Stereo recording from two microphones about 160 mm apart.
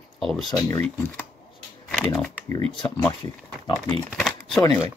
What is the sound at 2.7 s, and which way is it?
Speech, 25° left (ahead or behind).